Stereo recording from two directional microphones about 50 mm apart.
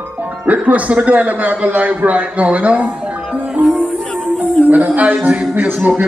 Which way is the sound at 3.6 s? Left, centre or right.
Right.